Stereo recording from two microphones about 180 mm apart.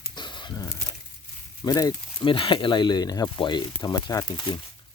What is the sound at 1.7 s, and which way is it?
Speech, 20° left (ahead or behind).